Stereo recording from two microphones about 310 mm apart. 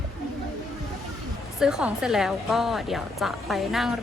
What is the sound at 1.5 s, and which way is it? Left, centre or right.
A woman's voice, centre.